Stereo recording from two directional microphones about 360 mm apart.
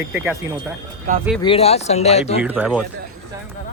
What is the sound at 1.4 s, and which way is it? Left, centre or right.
Speech, centre.